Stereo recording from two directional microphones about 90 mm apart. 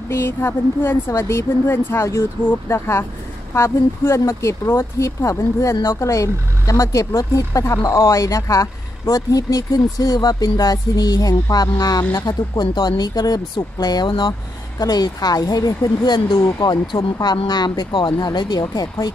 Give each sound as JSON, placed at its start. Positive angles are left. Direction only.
{"t": 0.1, "sound": "speech", "side_deg": 30}
{"t": 12.0, "sound": "speech", "side_deg": 30}
{"t": 12.3, "sound": "speech", "side_deg": 55}
{"t": 14.8, "sound": "speech", "side_deg": 45}
{"t": 16.8, "sound": "speech", "side_deg": 55}